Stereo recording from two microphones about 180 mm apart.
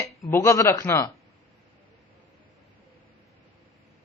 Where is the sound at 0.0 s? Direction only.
15° left (ahead or behind).